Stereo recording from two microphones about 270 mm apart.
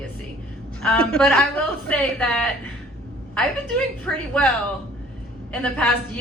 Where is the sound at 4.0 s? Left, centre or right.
Centre.